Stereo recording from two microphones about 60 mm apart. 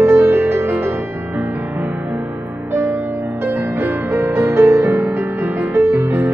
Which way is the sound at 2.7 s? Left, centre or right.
Right.